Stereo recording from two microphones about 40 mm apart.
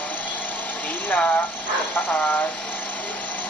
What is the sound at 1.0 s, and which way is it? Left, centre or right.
Speech, left.